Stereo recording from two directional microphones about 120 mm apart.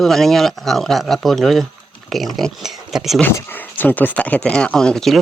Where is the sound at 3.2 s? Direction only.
15° left (ahead or behind).